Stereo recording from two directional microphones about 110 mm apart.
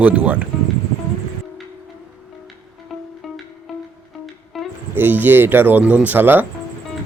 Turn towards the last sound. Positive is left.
turn(degrees=-15)  # may be behind; listen again after turning